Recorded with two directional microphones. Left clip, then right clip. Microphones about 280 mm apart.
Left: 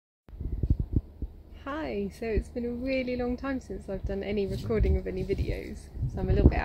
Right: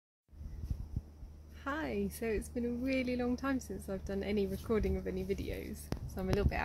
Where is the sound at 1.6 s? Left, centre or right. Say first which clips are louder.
Left 4 dB; centre.